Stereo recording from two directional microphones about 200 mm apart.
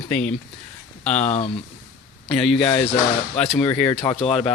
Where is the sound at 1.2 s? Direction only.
35° left (ahead or behind).